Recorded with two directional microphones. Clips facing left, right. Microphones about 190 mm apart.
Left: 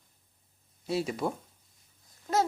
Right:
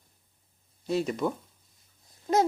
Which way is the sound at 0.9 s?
5° left (ahead or behind).